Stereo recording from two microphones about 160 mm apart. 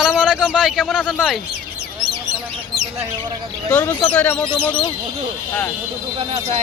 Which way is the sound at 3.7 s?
10° left (ahead or behind).